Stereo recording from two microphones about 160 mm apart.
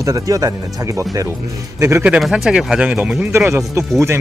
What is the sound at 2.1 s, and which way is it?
Speech, centre (ahead or behind).